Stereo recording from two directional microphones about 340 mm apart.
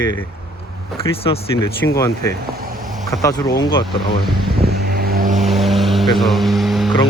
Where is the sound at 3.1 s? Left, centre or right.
Centre.